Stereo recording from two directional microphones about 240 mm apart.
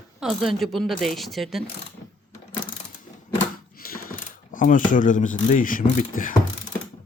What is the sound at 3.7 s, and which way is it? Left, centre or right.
Speech, left.